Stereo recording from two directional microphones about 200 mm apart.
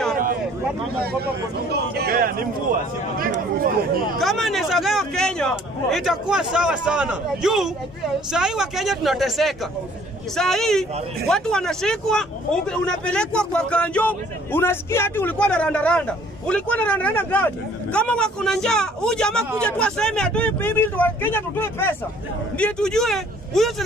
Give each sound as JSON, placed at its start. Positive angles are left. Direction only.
{"t": 1.0, "sound": "speech", "side_deg": -50}
{"t": 4.2, "sound": "a man's voice", "side_deg": 0}